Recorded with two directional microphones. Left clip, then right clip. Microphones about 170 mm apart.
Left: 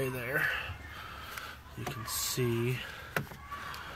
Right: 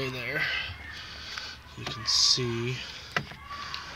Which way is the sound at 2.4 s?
10° left (ahead or behind).